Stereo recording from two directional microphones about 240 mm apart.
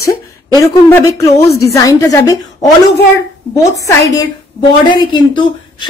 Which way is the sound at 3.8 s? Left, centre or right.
Centre.